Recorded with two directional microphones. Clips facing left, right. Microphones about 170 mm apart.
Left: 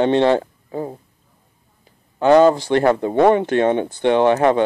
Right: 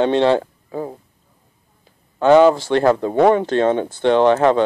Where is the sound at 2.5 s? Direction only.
15° left (ahead or behind).